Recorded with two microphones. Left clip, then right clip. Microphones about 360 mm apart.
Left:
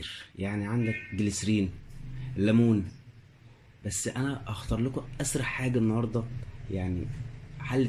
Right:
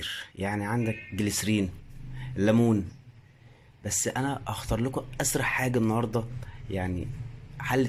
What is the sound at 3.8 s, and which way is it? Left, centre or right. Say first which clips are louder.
Speech: right 4 dB; centre.